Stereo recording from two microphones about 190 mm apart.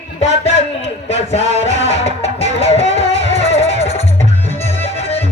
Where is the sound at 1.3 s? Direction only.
35° left (ahead or behind).